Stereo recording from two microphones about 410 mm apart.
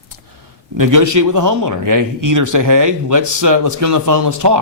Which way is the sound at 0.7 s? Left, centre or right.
Right.